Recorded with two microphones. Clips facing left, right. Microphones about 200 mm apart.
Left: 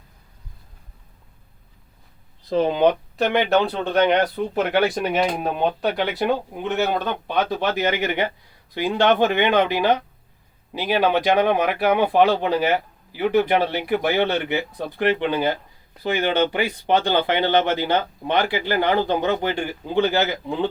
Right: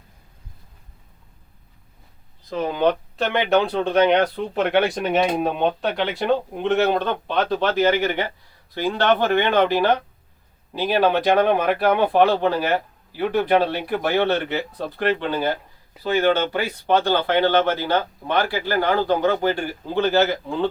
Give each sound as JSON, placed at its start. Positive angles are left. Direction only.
{"t": 2.5, "sound": "speech", "side_deg": 30}
{"t": 3.2, "sound": "speech", "side_deg": 5}